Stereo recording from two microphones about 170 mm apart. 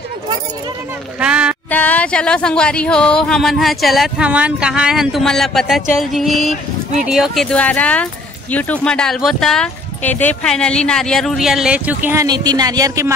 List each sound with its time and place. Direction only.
1.2 s speech: 5° right (ahead or behind)
1.7 s speech: 10° left (ahead or behind); by 12.3 s 10° right (ahead or behind)
12.3 s speech: 25° right (ahead or behind)